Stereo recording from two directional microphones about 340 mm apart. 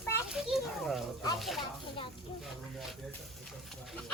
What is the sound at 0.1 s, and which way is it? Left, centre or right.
Children playing, centre.